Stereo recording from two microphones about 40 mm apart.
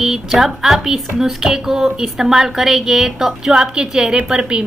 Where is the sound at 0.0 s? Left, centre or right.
Centre.